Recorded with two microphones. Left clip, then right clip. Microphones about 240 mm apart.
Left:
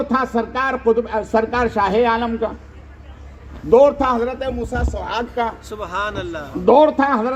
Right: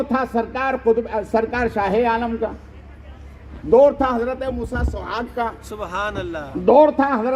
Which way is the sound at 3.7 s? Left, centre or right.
Left.